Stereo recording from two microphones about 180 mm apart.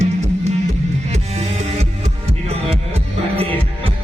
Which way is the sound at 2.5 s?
35° right (ahead or behind).